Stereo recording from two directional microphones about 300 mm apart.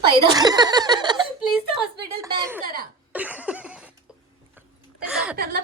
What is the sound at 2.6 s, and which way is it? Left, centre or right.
Cough, right.